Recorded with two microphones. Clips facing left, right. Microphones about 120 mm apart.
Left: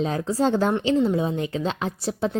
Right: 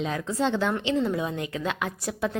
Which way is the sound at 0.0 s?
35° left (ahead or behind).